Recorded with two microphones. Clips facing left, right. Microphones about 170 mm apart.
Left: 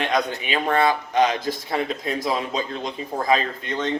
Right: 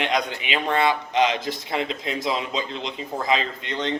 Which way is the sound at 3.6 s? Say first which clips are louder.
Left 2 dB; 20° right (ahead or behind).